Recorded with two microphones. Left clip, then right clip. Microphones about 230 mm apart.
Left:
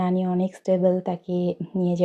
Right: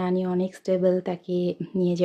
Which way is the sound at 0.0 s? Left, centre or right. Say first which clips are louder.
Left 1 dB; centre.